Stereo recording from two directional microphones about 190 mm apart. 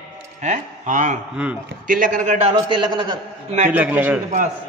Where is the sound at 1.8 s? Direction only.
45° right (ahead or behind); by 3.2 s 25° right (ahead or behind).